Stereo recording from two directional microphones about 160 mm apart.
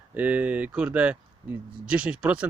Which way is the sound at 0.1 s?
10° right (ahead or behind).